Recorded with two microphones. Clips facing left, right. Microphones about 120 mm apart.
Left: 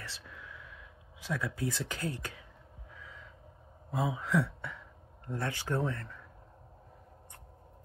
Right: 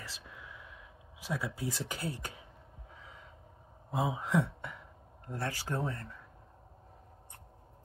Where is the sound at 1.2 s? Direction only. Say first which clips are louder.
Left 2 dB; 15° right (ahead or behind).